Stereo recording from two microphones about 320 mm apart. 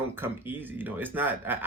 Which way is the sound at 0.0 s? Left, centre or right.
Centre.